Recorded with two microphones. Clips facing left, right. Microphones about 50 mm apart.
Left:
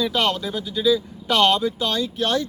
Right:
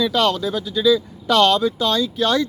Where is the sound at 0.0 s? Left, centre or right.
Right.